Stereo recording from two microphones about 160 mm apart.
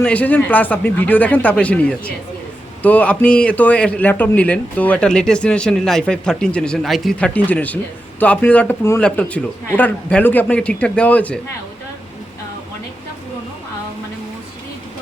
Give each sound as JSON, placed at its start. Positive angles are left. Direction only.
{"t": 0.0, "sound": "a man's voice", "side_deg": 10}